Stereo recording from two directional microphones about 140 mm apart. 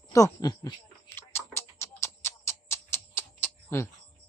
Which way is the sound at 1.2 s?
20° left (ahead or behind).